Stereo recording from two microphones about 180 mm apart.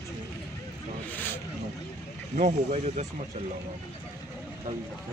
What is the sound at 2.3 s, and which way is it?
Speech, 45° right (ahead or behind).